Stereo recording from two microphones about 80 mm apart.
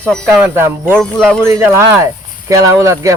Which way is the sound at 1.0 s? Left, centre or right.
Centre.